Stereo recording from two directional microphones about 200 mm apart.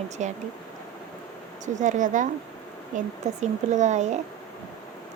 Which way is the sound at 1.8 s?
40° right (ahead or behind).